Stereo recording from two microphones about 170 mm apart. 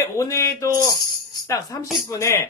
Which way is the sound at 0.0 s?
15° left (ahead or behind).